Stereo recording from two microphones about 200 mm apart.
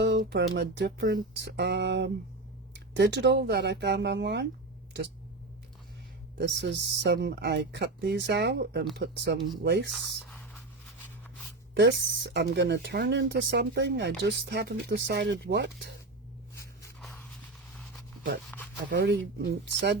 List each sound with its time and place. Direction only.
0.0 s speech: 50° right (ahead or behind)
6.3 s speech: 60° right (ahead or behind)
11.7 s speech: 60° right (ahead or behind)
18.5 s a sound: 10° left (ahead or behind)
18.9 s speech: 55° right (ahead or behind)